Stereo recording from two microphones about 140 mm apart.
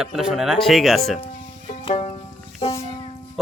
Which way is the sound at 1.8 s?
45° left (ahead or behind).